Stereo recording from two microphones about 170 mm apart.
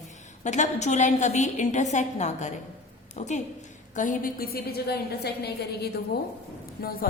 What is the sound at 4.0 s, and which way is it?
A woman's voice, 55° left (ahead or behind).